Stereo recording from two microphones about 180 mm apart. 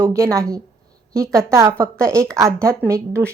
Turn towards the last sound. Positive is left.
turn(degrees=-15)  # may be behind; listen again after turning